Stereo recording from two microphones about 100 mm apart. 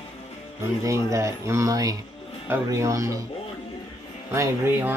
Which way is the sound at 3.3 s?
75° left (ahead or behind).